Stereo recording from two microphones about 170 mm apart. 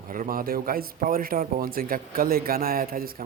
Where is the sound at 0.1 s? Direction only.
55° right (ahead or behind).